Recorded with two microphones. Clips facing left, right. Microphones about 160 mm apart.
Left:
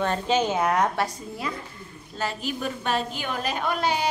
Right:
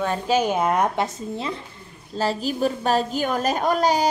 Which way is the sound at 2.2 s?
35° right (ahead or behind).